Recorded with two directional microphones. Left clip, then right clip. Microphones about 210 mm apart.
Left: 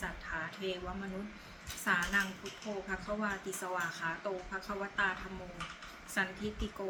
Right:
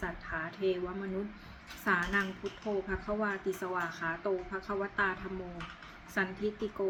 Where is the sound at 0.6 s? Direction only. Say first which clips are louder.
Right 9 dB; 10° left (ahead or behind).